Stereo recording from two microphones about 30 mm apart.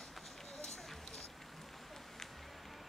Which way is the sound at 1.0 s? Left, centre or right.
Centre.